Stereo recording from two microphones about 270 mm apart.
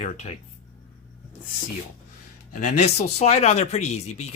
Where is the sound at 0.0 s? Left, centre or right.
Left.